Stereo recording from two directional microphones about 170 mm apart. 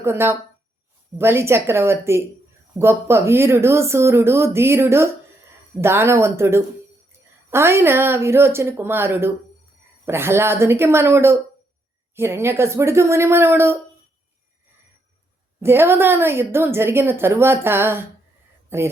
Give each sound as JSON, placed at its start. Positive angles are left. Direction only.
{"t": 0.0, "sound": "speech", "side_deg": -15}
{"t": 15.6, "sound": "speech", "side_deg": -15}